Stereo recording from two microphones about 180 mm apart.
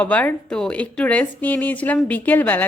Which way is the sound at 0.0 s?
10° left (ahead or behind).